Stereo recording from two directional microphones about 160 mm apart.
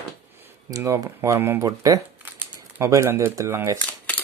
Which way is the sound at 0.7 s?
20° right (ahead or behind).